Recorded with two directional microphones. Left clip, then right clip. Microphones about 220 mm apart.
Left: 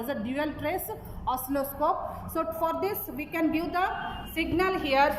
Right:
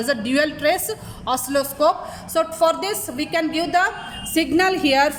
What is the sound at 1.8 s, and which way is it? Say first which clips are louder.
A woman's voice: right 8 dB; 35° right (ahead or behind).